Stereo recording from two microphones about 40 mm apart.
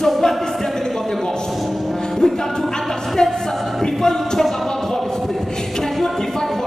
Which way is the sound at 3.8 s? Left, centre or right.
Centre.